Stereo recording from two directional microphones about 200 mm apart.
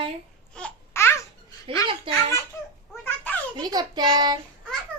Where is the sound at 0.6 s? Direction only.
10° left (ahead or behind).